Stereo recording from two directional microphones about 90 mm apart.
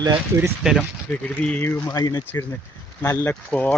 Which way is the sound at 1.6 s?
25° left (ahead or behind).